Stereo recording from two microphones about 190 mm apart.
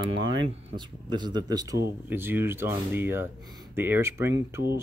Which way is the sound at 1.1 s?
20° right (ahead or behind).